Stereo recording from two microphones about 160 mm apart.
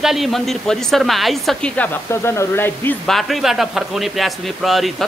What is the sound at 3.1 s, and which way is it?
Speech, centre (ahead or behind).